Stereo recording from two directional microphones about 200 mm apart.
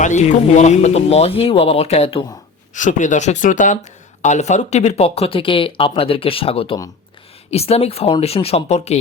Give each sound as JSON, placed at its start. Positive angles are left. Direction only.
{"t": 0.0, "sound": "speech", "side_deg": 35}